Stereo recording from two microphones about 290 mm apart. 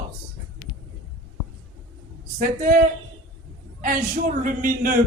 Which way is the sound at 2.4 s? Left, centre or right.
Right.